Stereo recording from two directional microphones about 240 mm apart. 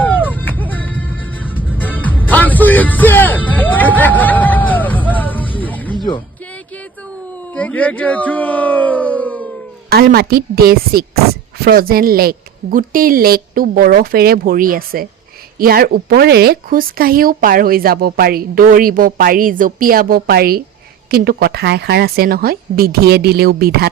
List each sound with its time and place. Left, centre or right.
0.3 s music: centre
7.5 s speech: centre
9.9 s a woman's voice: right